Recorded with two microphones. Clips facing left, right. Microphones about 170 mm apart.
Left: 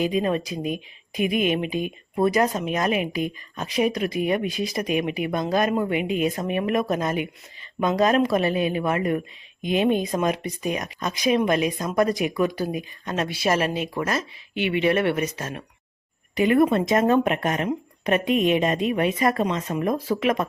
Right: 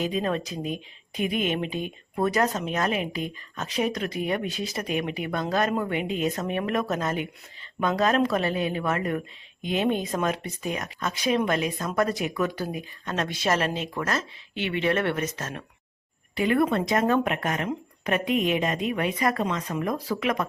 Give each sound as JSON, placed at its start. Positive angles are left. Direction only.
{"t": 0.0, "sound": "speech", "side_deg": 10}